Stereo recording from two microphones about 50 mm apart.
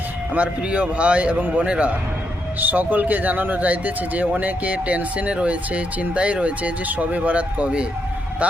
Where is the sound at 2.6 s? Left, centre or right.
Right.